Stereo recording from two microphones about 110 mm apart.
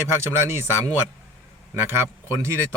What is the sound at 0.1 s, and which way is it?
Speech, 25° right (ahead or behind).